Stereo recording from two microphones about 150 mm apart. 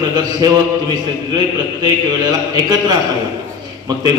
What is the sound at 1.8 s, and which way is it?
A man's voice, 30° right (ahead or behind).